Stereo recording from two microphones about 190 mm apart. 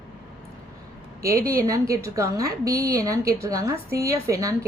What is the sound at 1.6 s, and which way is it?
A woman's voice, 15° right (ahead or behind).